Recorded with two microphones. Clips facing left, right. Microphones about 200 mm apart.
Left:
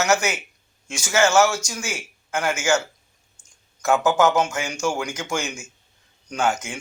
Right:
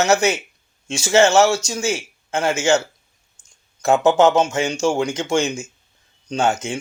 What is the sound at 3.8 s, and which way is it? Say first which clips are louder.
A man's voice: right 4 dB; 25° right (ahead or behind).